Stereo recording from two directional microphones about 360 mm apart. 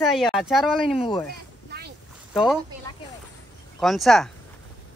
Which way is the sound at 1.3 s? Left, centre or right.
Right.